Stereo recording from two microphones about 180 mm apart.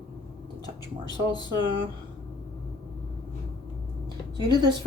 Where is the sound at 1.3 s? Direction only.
25° left (ahead or behind).